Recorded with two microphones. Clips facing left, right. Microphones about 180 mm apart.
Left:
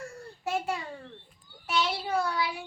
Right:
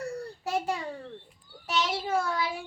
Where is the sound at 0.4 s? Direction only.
40° right (ahead or behind).